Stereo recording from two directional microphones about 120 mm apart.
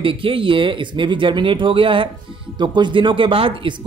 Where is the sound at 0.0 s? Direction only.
50° right (ahead or behind).